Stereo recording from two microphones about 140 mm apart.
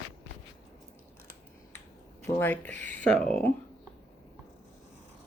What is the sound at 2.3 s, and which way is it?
Speech, 15° left (ahead or behind).